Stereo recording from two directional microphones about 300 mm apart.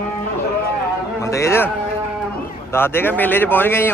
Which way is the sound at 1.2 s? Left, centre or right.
Centre.